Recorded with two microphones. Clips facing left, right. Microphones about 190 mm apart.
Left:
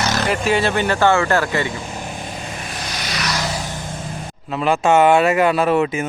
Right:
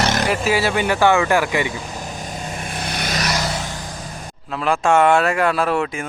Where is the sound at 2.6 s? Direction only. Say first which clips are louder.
Right 3 dB; 55° right (ahead or behind).